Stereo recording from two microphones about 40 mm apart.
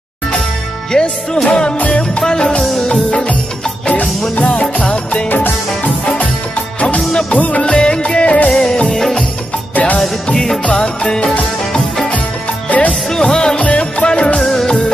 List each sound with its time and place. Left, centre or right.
0.9 s music: centre; by 2.2 s left
2.2 s music: centre
4.5 s music: left
7.0 s music: centre
7.3 s music of bollywood: left
7.6 s music: left
10.2 s music: centre
12.6 s music: left
13.1 s music: centre
13.6 s music: left
14.4 s music: centre